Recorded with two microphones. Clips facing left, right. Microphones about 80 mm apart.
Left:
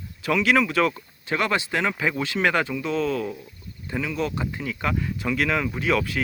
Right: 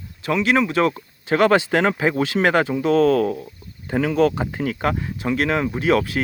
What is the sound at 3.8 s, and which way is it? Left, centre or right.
Speech, right.